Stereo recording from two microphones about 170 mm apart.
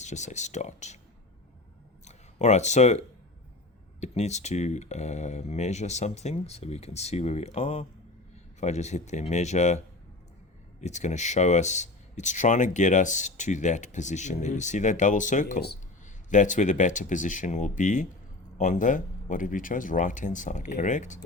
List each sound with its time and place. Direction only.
0.0 s speech: 45° left (ahead or behind)
2.0 s speech: 40° left (ahead or behind)
4.0 s speech: 40° left (ahead or behind)